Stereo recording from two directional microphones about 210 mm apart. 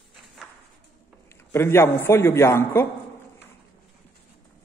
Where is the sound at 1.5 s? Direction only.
10° left (ahead or behind).